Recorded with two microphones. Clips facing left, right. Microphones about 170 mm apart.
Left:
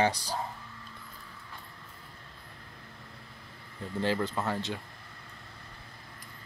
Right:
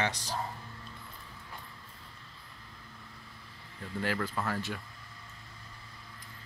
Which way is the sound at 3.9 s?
25° left (ahead or behind).